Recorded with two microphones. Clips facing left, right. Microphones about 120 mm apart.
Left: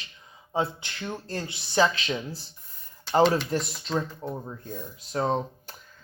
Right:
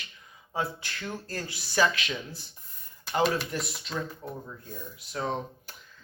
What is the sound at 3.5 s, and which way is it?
A woman's voice, 35° left (ahead or behind).